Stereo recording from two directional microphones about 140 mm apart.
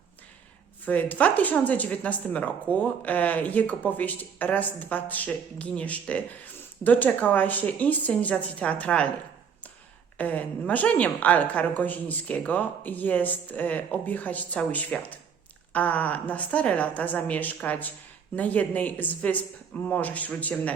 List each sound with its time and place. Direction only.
0.9 s speech: 10° left (ahead or behind)
10.2 s speech: 10° left (ahead or behind)